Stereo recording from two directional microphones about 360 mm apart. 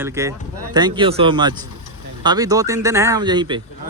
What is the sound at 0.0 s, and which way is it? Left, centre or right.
Speech, centre.